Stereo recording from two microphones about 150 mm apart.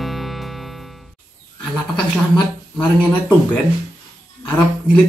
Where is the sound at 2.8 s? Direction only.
10° left (ahead or behind).